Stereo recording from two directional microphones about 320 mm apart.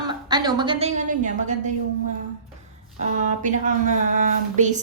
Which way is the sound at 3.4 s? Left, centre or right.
Right.